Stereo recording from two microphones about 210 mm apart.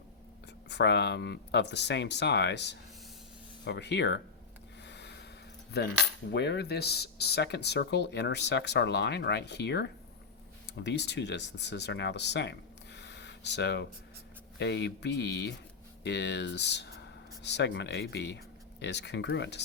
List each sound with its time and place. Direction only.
0.7 s speech: 55° left (ahead or behind)
4.9 s snort: 55° left (ahead or behind)
6.3 s speech: 55° left (ahead or behind)